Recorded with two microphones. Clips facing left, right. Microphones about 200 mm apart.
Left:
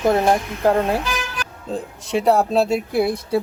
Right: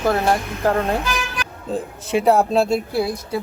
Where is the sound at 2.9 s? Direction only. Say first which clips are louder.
Left 2 dB; 20° left (ahead or behind).